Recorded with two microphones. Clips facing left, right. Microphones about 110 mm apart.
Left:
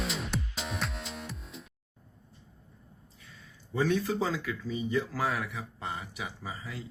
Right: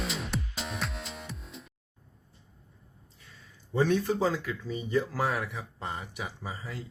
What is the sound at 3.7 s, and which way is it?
Speech, 40° right (ahead or behind).